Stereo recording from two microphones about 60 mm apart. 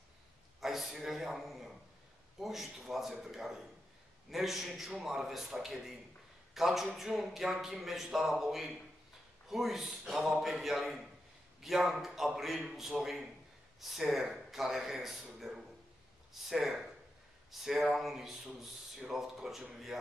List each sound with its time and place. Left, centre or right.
0.6 s a man's voice: centre